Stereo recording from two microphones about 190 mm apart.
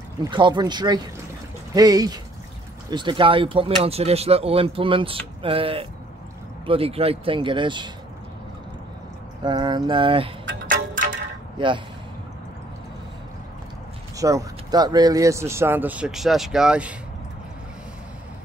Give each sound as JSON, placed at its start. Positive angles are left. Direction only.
{"t": 0.2, "sound": "speech", "side_deg": -25}
{"t": 9.4, "sound": "speech", "side_deg": -25}
{"t": 11.5, "sound": "speech", "side_deg": -25}
{"t": 14.1, "sound": "speech", "side_deg": -15}